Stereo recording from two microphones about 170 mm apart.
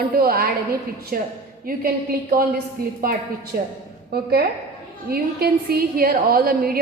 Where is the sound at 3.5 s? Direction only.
60° right (ahead or behind).